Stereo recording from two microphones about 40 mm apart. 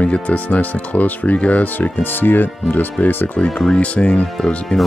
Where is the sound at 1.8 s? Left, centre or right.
Left.